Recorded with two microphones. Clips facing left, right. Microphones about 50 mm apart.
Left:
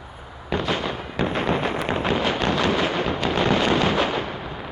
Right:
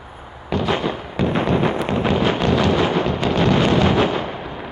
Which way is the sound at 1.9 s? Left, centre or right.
Centre.